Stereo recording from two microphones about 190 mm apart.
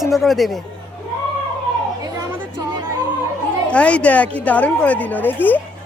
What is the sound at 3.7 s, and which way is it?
A woman's voice, 5° left (ahead or behind).